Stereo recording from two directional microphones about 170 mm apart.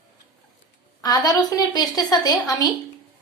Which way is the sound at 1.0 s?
20° left (ahead or behind).